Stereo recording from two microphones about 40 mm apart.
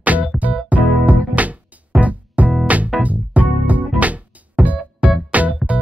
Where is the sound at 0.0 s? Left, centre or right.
Right.